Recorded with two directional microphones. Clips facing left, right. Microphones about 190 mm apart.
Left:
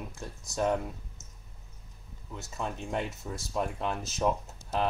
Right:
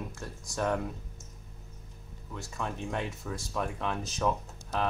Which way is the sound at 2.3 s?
20° left (ahead or behind).